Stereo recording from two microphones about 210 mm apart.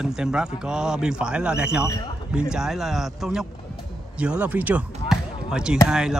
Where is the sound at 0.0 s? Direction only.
5° right (ahead or behind).